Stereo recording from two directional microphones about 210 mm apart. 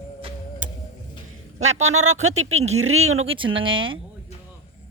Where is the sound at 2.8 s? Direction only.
85° right.